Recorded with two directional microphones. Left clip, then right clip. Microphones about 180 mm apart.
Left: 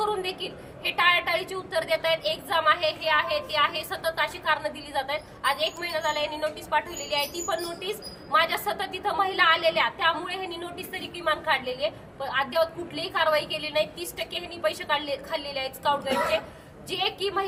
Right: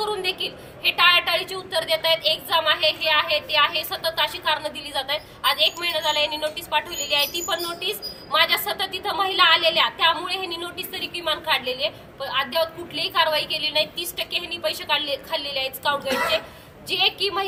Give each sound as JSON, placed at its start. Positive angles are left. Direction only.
{"t": 0.3, "sound": "a woman's voice", "side_deg": 10}
{"t": 11.5, "sound": "a woman's voice", "side_deg": 45}
{"t": 11.8, "sound": "a woman's voice", "side_deg": 15}